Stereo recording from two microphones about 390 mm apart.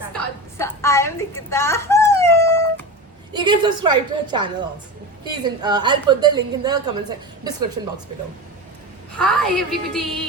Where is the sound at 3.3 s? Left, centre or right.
Centre.